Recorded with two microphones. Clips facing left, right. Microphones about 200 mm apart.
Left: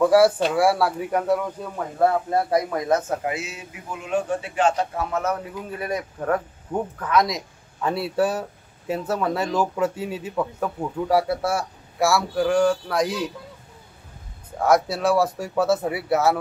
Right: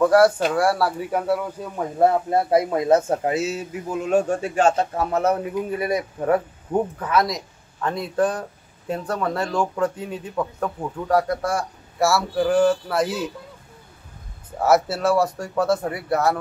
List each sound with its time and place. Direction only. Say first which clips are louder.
0.0 s speech: right 1 dB; centre (ahead or behind)
2.0 s speech: right 2 dB; 25° right (ahead or behind)
5.4 s speech: right 7 dB; 15° right (ahead or behind)
14.6 s speech: right 1 dB; 5° right (ahead or behind)